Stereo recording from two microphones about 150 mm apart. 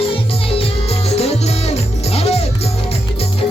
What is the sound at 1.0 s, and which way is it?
Music, 45° left (ahead or behind).